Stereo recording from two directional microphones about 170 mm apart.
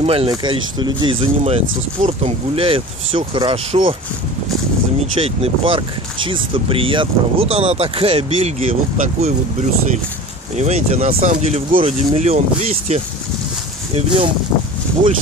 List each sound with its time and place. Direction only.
0.0 s speech: 35° right (ahead or behind)
5.2 s speech: 30° right (ahead or behind)